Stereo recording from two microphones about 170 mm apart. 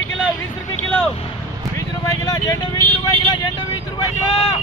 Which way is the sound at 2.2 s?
20° left (ahead or behind).